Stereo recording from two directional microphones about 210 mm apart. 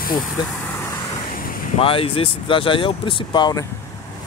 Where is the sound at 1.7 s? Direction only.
25° left (ahead or behind).